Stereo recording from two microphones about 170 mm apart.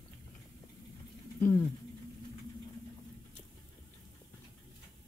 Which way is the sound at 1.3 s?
15° left (ahead or behind).